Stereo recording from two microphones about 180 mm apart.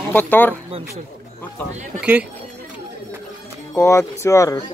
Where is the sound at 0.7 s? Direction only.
35° right (ahead or behind).